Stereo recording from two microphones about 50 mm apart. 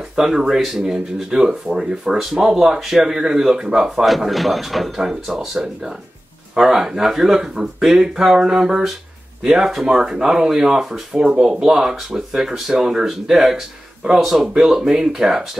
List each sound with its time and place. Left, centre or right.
0.1 s speech: centre
4.0 s speech: centre